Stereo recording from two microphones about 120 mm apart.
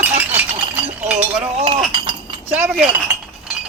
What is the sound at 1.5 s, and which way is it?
Chink, 60° right (ahead or behind).